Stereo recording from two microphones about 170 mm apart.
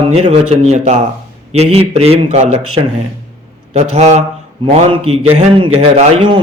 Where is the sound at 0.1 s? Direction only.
35° right (ahead or behind).